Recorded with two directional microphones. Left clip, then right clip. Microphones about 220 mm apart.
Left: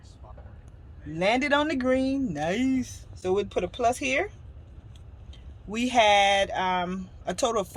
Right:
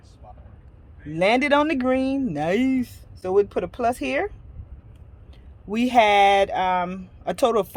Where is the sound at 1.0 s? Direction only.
40° right (ahead or behind).